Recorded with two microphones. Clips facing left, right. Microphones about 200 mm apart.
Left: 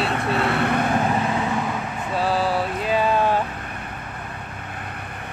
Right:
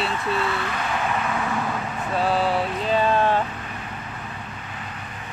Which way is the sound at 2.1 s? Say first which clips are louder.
Even; 5° left (ahead or behind).